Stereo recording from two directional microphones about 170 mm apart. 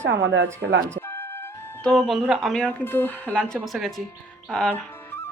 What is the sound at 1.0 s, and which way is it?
Speech, 15° left (ahead or behind).